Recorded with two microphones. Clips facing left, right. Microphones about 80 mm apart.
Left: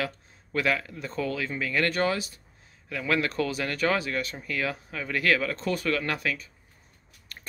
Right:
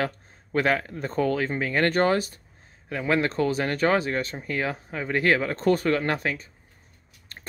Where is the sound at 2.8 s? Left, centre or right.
Right.